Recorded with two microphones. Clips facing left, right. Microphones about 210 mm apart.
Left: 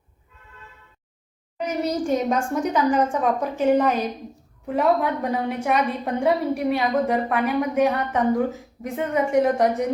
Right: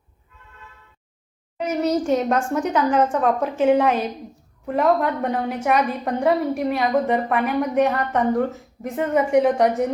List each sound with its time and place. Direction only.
1.5 s a woman's voice: centre (ahead or behind)